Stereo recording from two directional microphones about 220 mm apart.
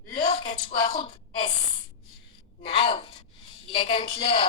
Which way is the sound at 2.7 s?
25° left (ahead or behind).